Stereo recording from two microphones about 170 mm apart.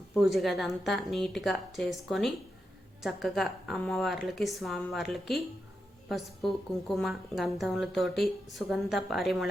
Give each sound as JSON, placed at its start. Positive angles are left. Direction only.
{"t": 0.3, "sound": "a woman's voice", "side_deg": 0}